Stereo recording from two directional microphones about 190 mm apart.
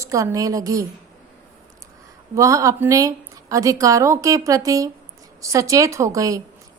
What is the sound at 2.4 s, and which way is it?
A woman's voice, 15° right (ahead or behind).